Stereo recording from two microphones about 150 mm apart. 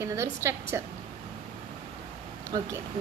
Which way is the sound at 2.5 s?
30° right (ahead or behind).